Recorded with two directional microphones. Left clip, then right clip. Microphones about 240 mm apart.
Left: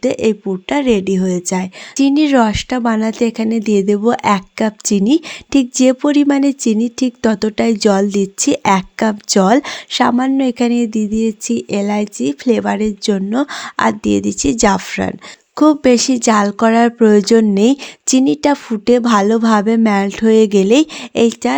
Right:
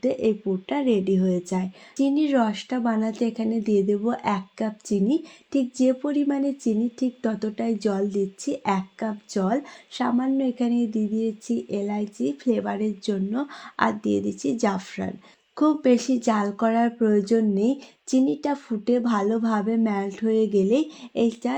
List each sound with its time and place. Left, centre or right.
0.0 s a woman's voice: left